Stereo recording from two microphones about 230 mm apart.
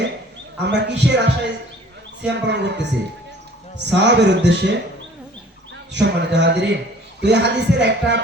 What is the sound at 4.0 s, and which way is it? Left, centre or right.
Speech, right.